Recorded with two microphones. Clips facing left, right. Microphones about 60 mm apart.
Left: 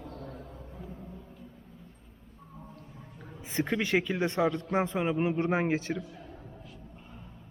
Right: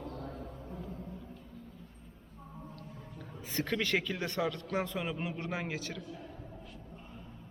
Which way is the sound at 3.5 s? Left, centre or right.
Centre.